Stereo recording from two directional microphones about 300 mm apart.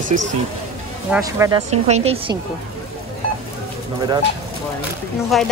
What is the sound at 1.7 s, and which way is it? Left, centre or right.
Speech, right.